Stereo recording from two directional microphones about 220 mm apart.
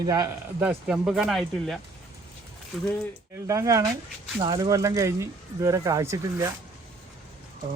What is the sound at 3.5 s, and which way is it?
Speech, 15° right (ahead or behind).